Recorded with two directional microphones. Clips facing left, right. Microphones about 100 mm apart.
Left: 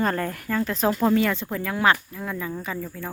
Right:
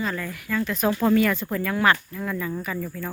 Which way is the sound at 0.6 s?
30° left (ahead or behind).